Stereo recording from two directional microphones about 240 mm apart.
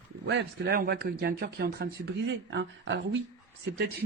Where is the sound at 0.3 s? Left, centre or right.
Right.